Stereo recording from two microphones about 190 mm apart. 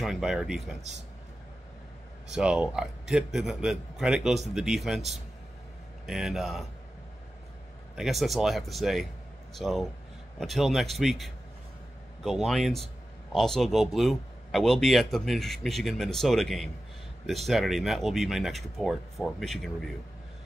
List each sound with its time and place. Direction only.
0.0 s a man's voice: centre (ahead or behind)
2.2 s a man's voice: 5° right (ahead or behind)
7.9 s a man's voice: centre (ahead or behind)